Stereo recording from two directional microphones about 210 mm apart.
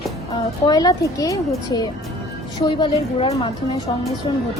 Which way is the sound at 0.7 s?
20° left (ahead or behind).